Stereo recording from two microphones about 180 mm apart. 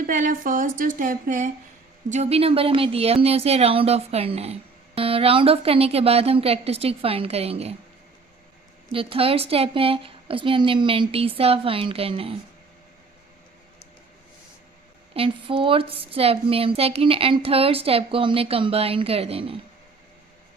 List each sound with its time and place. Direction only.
0.0 s a woman's voice: 45° right (ahead or behind)
8.9 s speech: 30° right (ahead or behind)
15.1 s speech: 30° right (ahead or behind)